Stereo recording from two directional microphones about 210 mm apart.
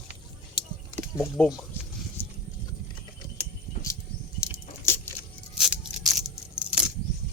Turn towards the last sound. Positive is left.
turn(degrees=-5)  # may be behind; listen again after turning